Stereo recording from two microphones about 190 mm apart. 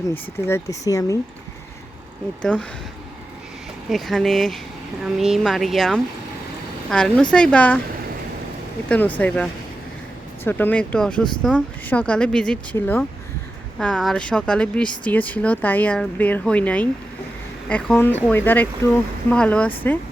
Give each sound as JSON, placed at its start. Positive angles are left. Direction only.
{"t": 0.1, "sound": "speech", "side_deg": 15}
{"t": 2.4, "sound": "speech", "side_deg": 5}
{"t": 3.8, "sound": "speech", "side_deg": 0}
{"t": 8.9, "sound": "speech", "side_deg": 10}